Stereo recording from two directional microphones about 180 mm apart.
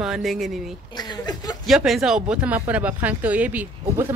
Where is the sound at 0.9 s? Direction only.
20° left (ahead or behind).